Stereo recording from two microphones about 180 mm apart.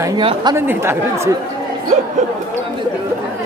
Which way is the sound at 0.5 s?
15° right (ahead or behind).